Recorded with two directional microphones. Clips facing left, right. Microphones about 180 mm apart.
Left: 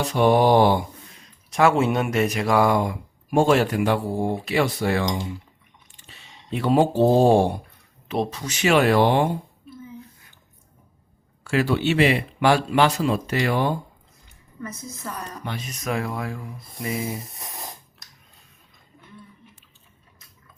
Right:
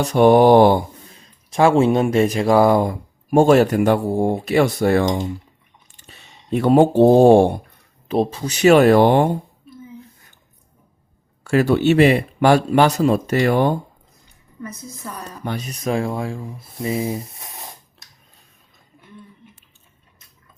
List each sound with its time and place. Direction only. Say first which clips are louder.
0.0 s speech: right 6 dB; 45° right (ahead or behind)
1.1 s speech: right 4 dB; 30° right (ahead or behind); by 5.0 s 45° right (ahead or behind)
6.1 s speech: right 7 dB; 45° right (ahead or behind)
8.0 s speech: right 6 dB; 30° right (ahead or behind)
11.4 s speech: right 6 dB; 45° right (ahead or behind)
14.6 s a woman's voice: right 1 dB; 15° right (ahead or behind)
15.4 s speech: right 6 dB; 40° right (ahead or behind)
17.2 s a sound: right 4 dB; centre (ahead or behind)